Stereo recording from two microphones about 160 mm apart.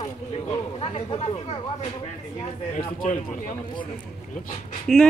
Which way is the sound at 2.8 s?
55° left (ahead or behind).